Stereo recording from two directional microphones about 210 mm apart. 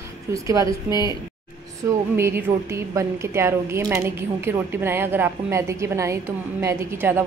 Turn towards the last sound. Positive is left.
turn(degrees=-10)  # may be behind; listen again after turning